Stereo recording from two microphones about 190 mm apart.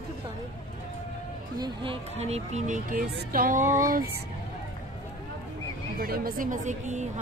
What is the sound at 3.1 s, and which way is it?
Music, 50° right (ahead or behind).